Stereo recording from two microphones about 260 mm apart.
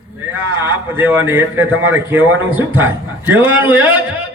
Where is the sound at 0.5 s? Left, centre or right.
Centre.